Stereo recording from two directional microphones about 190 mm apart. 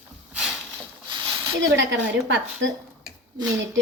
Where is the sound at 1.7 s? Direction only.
70° right (ahead or behind).